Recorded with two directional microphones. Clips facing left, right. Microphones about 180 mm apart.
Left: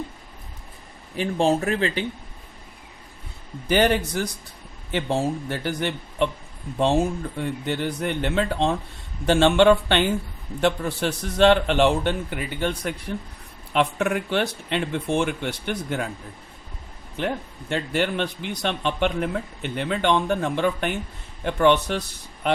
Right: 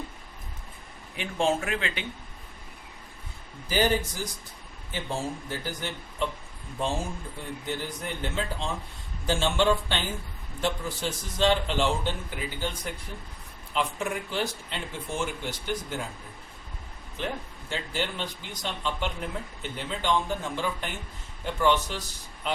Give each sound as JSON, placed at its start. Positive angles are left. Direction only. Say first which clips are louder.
{"t": 1.1, "sound": "speech", "louder": "left 5 dB", "side_deg": 35}
{"t": 3.7, "sound": "a man's voice", "louder": "left 5 dB", "side_deg": 70}
{"t": 17.2, "sound": "a man's voice", "louder": "left 6 dB", "side_deg": 65}